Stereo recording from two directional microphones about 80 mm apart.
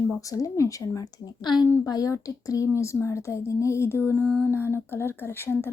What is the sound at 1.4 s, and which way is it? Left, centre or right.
Speech, left.